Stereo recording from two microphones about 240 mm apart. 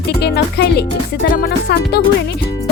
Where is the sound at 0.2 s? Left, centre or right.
Left.